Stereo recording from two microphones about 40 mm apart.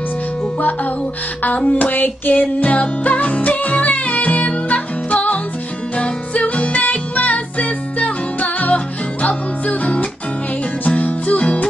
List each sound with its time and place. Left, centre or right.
0.6 s hands: left
1.6 s a sound: left
1.9 s hands: left
2.4 s music: left